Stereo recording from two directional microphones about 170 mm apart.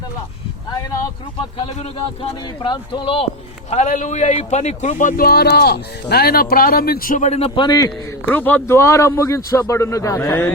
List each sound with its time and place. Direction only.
1.5 s speech: 35° left (ahead or behind)
3.7 s speech: 45° left (ahead or behind); by 7.9 s 25° left (ahead or behind)
8.3 s speech: 10° left (ahead or behind)